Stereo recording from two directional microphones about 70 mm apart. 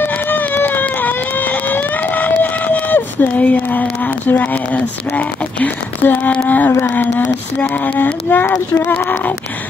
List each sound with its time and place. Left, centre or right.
0.0 s run: left
4.3 s music: left
6.7 s music: left